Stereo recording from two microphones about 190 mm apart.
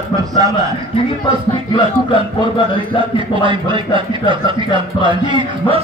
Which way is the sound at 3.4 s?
25° right (ahead or behind).